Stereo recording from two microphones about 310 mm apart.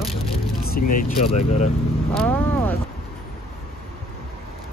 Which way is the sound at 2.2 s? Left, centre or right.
Centre.